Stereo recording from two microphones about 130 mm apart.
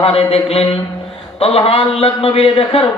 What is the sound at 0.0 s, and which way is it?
Speech, 50° left (ahead or behind).